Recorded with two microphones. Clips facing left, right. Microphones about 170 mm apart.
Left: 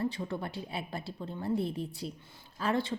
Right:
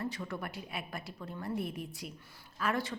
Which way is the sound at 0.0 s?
30° left (ahead or behind).